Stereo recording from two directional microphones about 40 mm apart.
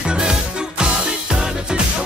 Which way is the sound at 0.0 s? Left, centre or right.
Right.